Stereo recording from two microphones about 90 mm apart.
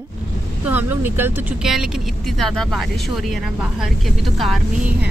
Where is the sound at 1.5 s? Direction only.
5° right (ahead or behind).